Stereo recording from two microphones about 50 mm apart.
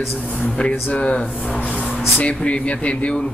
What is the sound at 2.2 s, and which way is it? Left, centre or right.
Speech, left.